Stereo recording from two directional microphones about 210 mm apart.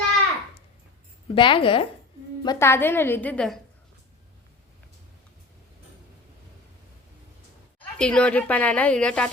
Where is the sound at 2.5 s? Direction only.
10° left (ahead or behind).